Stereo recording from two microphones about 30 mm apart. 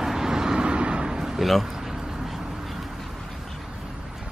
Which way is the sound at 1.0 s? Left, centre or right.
Centre.